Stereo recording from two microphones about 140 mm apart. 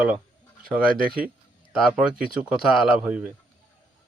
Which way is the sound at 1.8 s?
5° right (ahead or behind).